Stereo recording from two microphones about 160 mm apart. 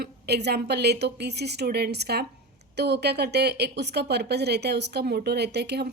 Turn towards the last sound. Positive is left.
turn(degrees=-90)